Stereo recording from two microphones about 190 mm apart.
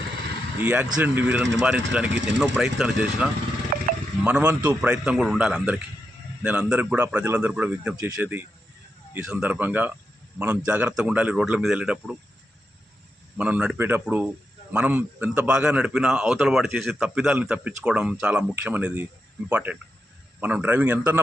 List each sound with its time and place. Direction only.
0.6 s a man's voice: 10° right (ahead or behind)
3.7 s a sound: 50° right (ahead or behind)
4.2 s a man's voice: 5° right (ahead or behind)
13.3 s a man's voice: 5° right (ahead or behind)